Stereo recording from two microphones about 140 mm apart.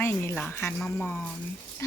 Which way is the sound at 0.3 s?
10° left (ahead or behind).